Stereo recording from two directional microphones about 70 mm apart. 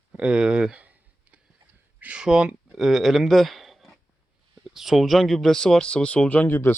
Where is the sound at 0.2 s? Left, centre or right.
Centre.